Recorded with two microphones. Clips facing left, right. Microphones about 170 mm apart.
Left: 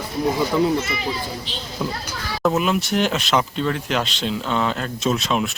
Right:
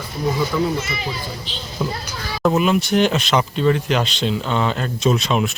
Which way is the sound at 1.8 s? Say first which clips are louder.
Right 2 dB; centre (ahead or behind).